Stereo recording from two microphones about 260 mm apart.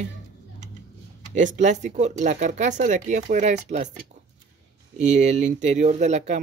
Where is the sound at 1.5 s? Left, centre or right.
Right.